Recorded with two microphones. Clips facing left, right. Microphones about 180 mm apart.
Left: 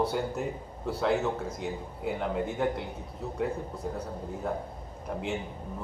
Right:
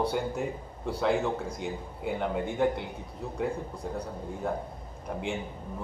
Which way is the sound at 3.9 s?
5° left (ahead or behind).